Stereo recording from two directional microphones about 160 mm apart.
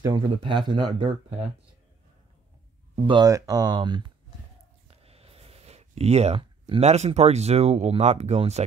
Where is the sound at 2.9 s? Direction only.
30° right (ahead or behind).